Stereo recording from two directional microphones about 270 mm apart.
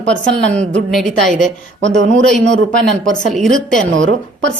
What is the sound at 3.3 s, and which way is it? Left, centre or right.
Speech, centre.